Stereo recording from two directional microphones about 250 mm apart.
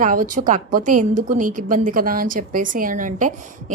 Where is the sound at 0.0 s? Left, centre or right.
Right.